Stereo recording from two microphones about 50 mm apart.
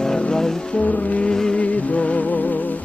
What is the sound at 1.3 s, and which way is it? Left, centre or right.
Vehicle, centre.